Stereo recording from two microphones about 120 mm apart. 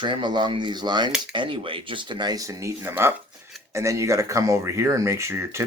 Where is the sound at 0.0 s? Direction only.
40° right (ahead or behind).